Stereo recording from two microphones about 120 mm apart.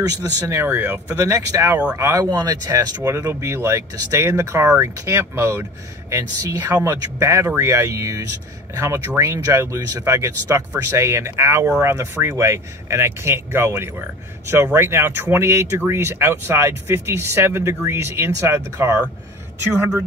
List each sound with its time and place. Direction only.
0.5 s speech: 20° right (ahead or behind)